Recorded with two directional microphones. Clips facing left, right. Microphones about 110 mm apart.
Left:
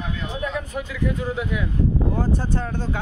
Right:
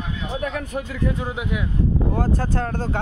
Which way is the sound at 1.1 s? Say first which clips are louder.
Left 1 dB; 25° right (ahead or behind).